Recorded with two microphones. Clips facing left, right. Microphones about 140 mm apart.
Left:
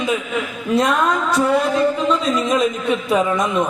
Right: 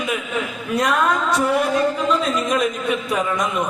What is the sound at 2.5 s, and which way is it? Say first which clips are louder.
A man's voice: left 2 dB; 25° left (ahead or behind).